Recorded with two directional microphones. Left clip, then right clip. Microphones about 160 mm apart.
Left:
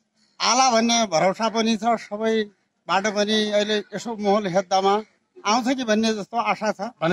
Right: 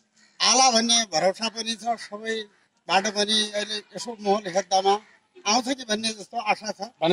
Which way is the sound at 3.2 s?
40° left (ahead or behind).